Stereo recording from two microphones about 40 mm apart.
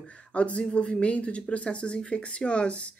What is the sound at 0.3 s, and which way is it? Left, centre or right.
A woman's voice, left.